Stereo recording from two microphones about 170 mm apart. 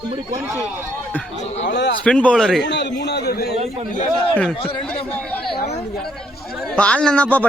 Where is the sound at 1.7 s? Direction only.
90° left.